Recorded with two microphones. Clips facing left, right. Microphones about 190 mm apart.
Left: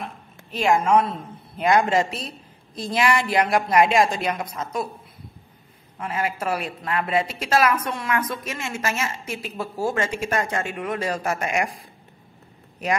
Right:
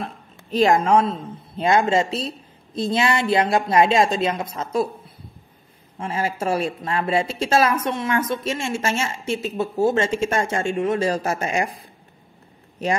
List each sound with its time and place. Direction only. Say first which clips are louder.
0.0 s a woman's voice: right 3 dB; 35° right (ahead or behind)
5.9 s a woman's voice: right 2 dB; 30° right (ahead or behind)